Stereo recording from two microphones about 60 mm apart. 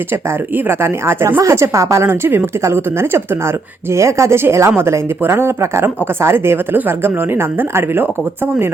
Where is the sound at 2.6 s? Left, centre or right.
Right.